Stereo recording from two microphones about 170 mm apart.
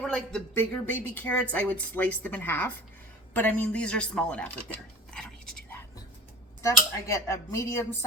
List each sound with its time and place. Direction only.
0.0 s speech: 5° left (ahead or behind)
6.6 s speech: 15° left (ahead or behind)